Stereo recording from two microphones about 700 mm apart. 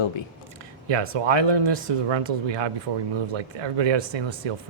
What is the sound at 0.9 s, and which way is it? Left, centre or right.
Speech, right.